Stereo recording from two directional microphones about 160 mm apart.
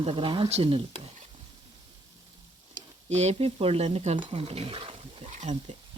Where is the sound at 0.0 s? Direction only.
35° right (ahead or behind).